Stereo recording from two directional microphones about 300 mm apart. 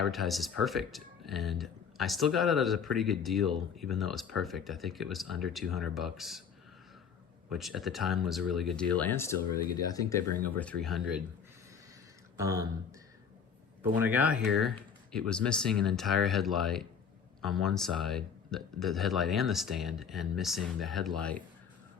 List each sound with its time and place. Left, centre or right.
0.0 s speech: centre
7.5 s speech: centre
12.4 s speech: centre
13.9 s speech: centre